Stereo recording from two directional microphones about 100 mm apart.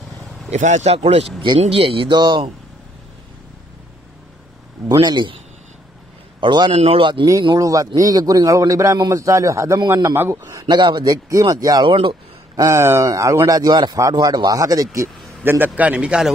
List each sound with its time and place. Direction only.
0.5 s speech: 90° right
1.4 s speech: 60° right (ahead or behind)
5.0 s speech: 50° right (ahead or behind)
6.4 s speech: 50° right (ahead or behind)
6.7 s speech: 75° right (ahead or behind)
7.5 s a man's voice: 35° right (ahead or behind)
10.4 s a man's voice: 40° right (ahead or behind)
10.8 s a man's voice: 50° right (ahead or behind)
11.9 s speech: 60° right (ahead or behind)
12.5 s a man's voice: 30° right (ahead or behind)
15.4 s a man's voice: 20° right (ahead or behind)